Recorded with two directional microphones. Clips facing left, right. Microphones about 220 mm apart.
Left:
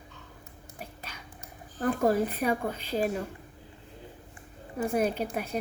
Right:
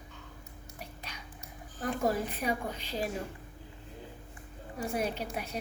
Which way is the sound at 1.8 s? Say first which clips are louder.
Left 6 dB; 50° left (ahead or behind).